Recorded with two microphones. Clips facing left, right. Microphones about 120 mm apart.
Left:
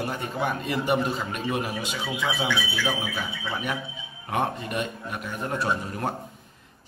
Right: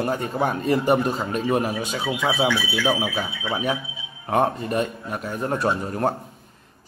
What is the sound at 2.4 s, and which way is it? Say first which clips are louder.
Speech: right 5 dB; centre (ahead or behind).